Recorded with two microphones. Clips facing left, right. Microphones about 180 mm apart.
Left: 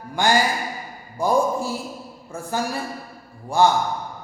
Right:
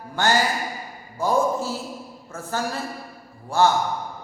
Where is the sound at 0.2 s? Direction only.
15° left (ahead or behind).